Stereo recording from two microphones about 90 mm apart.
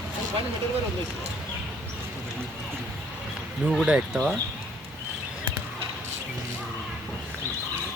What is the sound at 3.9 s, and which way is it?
Speech, 10° right (ahead or behind).